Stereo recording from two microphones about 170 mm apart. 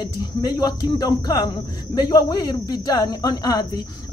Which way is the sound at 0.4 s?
20° left (ahead or behind).